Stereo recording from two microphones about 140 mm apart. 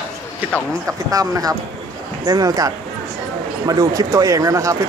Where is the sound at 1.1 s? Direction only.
25° right (ahead or behind).